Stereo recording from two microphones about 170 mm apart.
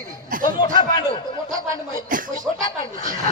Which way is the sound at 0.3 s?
55° right (ahead or behind).